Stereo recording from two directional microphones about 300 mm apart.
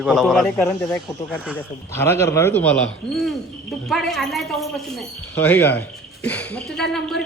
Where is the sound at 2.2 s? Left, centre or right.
Centre.